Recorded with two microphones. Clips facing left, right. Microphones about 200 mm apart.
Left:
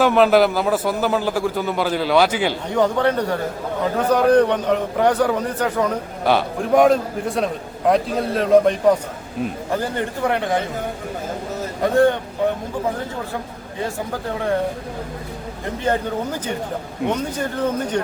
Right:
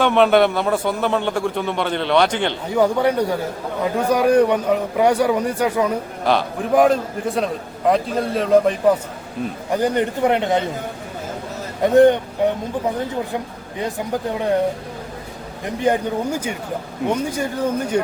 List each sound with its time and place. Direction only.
0.0 s a man's voice: centre (ahead or behind)
2.7 s a man's voice: 10° right (ahead or behind)
6.2 s a man's voice: centre (ahead or behind)
9.7 s a man's voice: 20° right (ahead or behind)
11.8 s a man's voice: 20° right (ahead or behind)
13.7 s a man's voice: 20° right (ahead or behind)
15.8 s a man's voice: 15° right (ahead or behind)